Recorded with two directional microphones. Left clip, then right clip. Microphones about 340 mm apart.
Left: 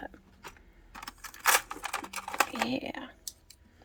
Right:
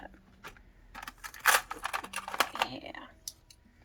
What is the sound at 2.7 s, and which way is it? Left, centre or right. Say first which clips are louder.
Speech: left 7 dB; left.